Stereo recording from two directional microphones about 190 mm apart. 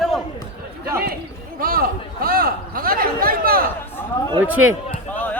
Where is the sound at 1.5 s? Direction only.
50° right (ahead or behind).